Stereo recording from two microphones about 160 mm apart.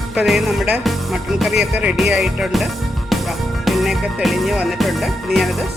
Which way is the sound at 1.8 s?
5° right (ahead or behind).